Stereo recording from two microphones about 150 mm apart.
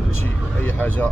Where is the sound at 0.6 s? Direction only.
10° left (ahead or behind).